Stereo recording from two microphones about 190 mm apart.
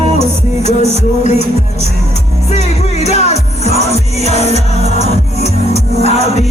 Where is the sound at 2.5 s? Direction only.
35° left (ahead or behind).